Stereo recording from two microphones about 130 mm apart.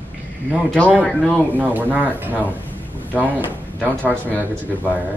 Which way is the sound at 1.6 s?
15° right (ahead or behind).